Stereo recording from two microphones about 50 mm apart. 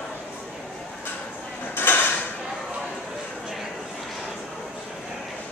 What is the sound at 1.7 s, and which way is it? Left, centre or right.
Drawer open or close, left.